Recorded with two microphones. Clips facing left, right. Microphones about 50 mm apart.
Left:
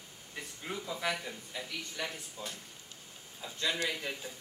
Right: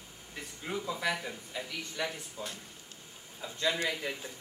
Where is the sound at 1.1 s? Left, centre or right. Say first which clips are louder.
Right 2 dB; centre.